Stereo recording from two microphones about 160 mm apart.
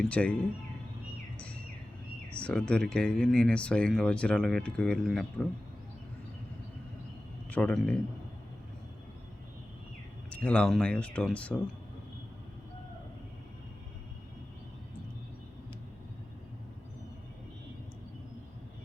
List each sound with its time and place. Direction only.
0.1 s speech: 10° left (ahead or behind)
2.3 s speech: 5° left (ahead or behind)
7.5 s speech: 5° left (ahead or behind)
10.2 s speech: 10° left (ahead or behind)